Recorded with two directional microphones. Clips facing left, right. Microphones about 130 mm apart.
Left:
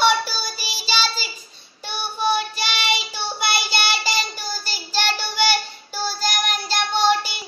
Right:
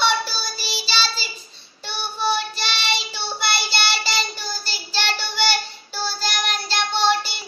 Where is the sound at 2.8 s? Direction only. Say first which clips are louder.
Left 2 dB; 50° left (ahead or behind).